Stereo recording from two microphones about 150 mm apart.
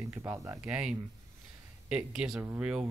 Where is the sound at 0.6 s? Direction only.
5° right (ahead or behind).